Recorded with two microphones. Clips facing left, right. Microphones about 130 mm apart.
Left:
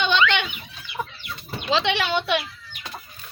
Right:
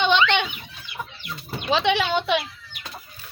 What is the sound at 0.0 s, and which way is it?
Fowl, 20° right (ahead or behind).